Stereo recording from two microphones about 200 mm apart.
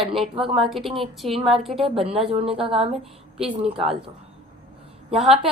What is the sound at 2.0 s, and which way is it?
Speech, 30° right (ahead or behind).